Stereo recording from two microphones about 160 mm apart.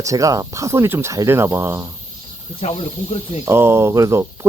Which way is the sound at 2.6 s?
40° left (ahead or behind).